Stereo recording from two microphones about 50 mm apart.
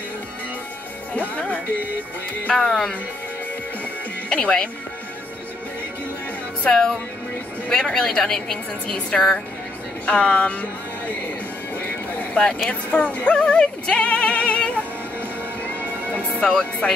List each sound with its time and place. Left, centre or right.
1.3 s speech: left
2.5 s a woman's voice: centre
4.3 s speech: centre
6.7 s a woman's voice: centre
10.0 s speech: left
12.6 s speech: left
13.3 s music: centre
16.4 s a woman's voice: centre